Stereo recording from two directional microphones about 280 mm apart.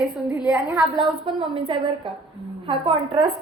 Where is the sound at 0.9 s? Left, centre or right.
Centre.